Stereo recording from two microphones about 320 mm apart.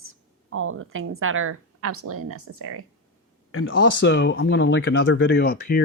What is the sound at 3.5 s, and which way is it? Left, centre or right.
Speech, left.